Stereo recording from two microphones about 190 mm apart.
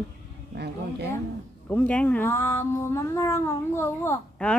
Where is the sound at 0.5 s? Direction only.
60° right (ahead or behind).